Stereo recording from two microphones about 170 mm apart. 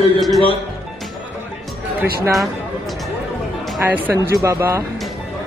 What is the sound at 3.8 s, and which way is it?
Speech, 15° right (ahead or behind).